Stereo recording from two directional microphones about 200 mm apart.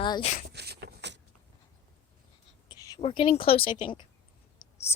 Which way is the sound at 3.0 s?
30° left (ahead or behind).